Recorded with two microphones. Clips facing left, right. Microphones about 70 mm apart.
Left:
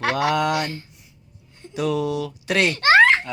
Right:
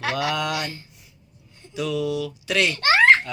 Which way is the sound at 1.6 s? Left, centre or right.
Left.